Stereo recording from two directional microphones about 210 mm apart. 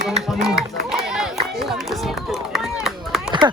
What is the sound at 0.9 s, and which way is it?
Run, centre (ahead or behind).